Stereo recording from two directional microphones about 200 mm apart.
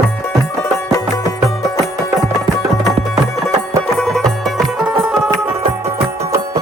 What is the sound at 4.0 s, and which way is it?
Music, 5° left (ahead or behind).